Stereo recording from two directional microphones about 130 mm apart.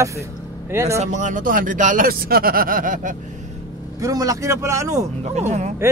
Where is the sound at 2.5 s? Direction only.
90° right.